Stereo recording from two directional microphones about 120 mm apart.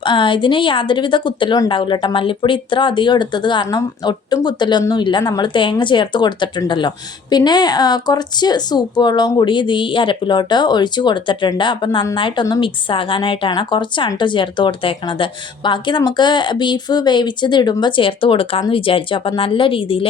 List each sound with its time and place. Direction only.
0.0 s a woman's voice: 45° left (ahead or behind)
5.2 s a woman's voice: 30° left (ahead or behind)
5.7 s a woman's voice: 40° left (ahead or behind)